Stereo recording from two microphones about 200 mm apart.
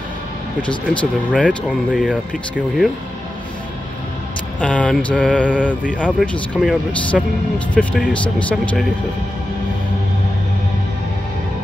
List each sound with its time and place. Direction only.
0.6 s speech: 25° left (ahead or behind)
1.3 s speech: 5° left (ahead or behind)
1.9 s speech: 5° right (ahead or behind)
4.6 s speech: 5° left (ahead or behind)
5.5 s speech: 5° right (ahead or behind)